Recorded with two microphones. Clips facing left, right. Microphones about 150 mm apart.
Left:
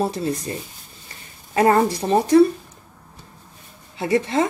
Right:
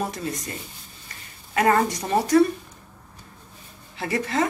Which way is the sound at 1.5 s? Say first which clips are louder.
Left 4 dB; 30° left (ahead or behind).